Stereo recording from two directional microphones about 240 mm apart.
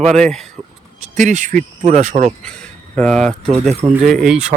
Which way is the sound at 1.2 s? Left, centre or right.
Right.